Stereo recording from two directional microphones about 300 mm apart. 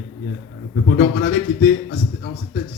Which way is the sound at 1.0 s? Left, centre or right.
Left.